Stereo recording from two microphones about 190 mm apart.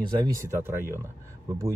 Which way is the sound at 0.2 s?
15° right (ahead or behind).